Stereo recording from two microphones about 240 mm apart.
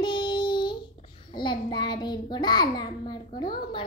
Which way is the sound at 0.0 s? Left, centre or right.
Centre.